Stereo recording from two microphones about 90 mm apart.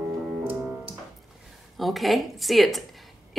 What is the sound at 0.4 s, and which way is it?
Piano, 20° right (ahead or behind).